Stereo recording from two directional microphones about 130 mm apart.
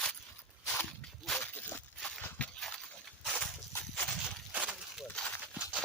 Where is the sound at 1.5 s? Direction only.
15° left (ahead or behind).